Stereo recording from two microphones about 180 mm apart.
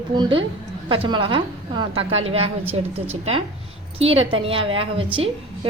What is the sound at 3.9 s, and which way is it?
A woman's voice, 35° right (ahead or behind).